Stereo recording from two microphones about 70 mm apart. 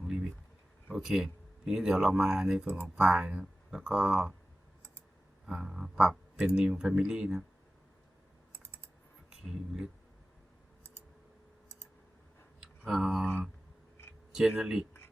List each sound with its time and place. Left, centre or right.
0.0 s a sound: centre
0.9 s speech: centre
5.5 s speech: centre
8.5 s typing: left
9.3 s speech: centre
12.5 s a sound: centre
14.3 s speech: centre